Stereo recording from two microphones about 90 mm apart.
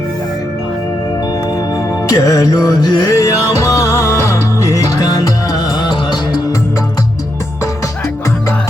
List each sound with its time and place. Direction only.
1.5 s music: 40° left (ahead or behind)
3.1 s music: 35° left (ahead or behind); by 6.4 s 55° left (ahead or behind)